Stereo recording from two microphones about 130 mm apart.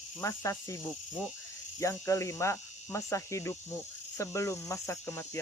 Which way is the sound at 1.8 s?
25° left (ahead or behind).